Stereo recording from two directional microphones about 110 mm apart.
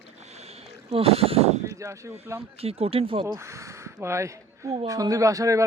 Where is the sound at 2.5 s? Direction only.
65° right (ahead or behind).